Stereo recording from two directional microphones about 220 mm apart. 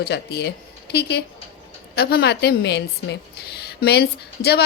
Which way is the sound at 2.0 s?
50° left (ahead or behind).